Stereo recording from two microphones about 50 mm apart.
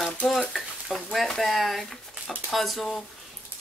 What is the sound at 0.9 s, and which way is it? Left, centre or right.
Speech, centre.